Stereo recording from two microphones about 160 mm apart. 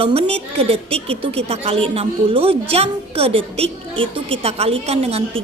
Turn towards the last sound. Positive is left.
turn(degrees=-40)  # may be behind; listen again after turning